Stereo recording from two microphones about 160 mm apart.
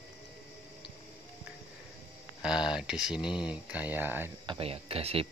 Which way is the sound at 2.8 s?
5° right (ahead or behind).